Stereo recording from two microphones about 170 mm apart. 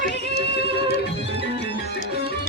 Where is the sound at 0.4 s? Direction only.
75° left (ahead or behind).